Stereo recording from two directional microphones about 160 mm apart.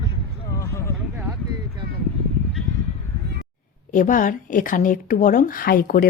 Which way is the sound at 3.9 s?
55° left (ahead or behind).